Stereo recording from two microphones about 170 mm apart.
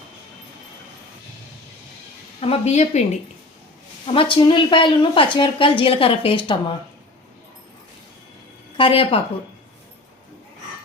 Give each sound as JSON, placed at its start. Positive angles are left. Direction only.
{"t": 2.4, "sound": "a woman's voice", "side_deg": 40}
{"t": 4.0, "sound": "a woman's voice", "side_deg": 30}
{"t": 8.8, "sound": "a woman's voice", "side_deg": 30}